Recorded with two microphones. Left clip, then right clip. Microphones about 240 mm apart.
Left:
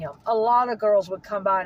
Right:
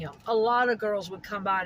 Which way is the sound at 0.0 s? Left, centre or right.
Centre.